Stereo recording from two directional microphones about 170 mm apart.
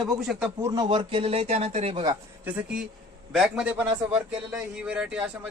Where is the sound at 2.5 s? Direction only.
5° right (ahead or behind).